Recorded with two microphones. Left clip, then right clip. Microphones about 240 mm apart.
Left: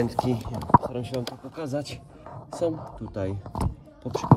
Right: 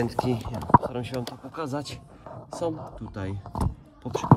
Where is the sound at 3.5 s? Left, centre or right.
Centre.